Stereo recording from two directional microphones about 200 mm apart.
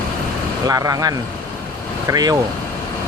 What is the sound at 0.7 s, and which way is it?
Speech, 20° right (ahead or behind).